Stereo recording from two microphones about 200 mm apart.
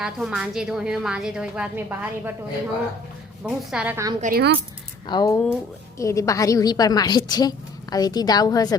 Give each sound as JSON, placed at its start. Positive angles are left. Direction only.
{"t": 0.0, "sound": "a woman's voice", "side_deg": 0}
{"t": 3.4, "sound": "a woman's voice", "side_deg": -5}
{"t": 4.2, "sound": "speech", "side_deg": -50}
{"t": 5.0, "sound": "a woman's voice", "side_deg": 20}